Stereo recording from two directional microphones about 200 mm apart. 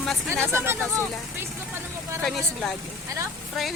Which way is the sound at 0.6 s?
10° right (ahead or behind).